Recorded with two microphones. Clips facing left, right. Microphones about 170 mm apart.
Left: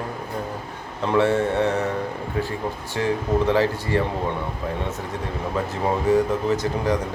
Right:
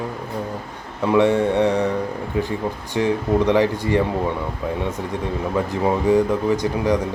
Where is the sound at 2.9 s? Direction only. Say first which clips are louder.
Right 3 dB; 15° right (ahead or behind).